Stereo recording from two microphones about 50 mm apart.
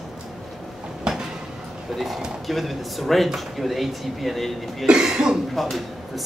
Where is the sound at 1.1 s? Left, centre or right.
Centre.